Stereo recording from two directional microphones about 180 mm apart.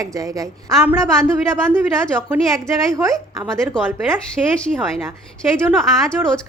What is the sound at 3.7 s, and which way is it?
Speech, 5° left (ahead or behind).